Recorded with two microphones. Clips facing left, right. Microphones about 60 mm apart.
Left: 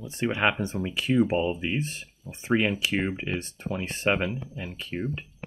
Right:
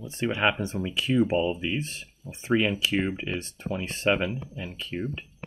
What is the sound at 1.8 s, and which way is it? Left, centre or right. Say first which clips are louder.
Speech: left 2 dB; centre.